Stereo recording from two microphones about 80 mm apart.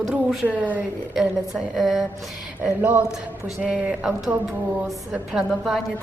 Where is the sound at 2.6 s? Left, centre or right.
Centre.